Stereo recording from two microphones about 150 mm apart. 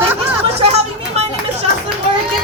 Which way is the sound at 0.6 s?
45° right (ahead or behind).